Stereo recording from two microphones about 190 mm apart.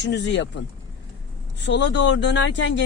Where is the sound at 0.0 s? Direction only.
65° left (ahead or behind).